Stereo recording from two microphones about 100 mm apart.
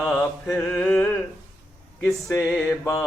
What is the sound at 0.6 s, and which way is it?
Mantra, 10° left (ahead or behind).